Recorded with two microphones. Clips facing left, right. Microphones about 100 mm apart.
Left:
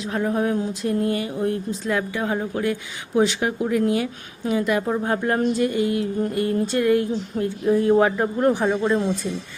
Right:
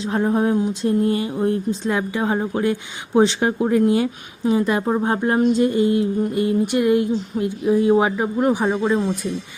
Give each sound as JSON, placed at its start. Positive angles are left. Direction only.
{"t": 0.0, "sound": "speech", "side_deg": -30}